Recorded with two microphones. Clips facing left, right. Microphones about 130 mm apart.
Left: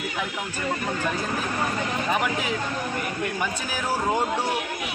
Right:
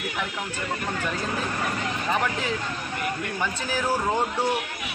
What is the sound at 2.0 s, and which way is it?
Speech, 15° left (ahead or behind).